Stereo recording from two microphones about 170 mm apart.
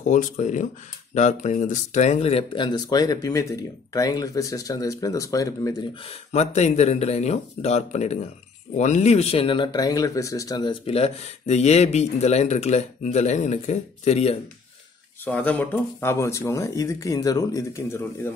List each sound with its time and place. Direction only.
0.0 s speech: 50° left (ahead or behind); by 5.9 s 20° left (ahead or behind)
6.0 s speech: 40° left (ahead or behind)
15.2 s speech: 10° left (ahead or behind)